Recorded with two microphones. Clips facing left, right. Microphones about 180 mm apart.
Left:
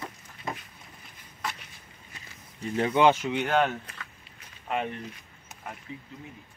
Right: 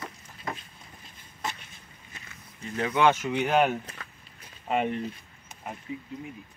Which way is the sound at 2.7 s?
25° left (ahead or behind).